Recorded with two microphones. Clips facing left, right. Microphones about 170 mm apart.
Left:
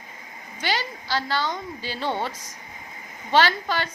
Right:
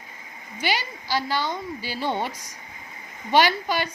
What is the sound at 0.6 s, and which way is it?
Speech, 10° right (ahead or behind).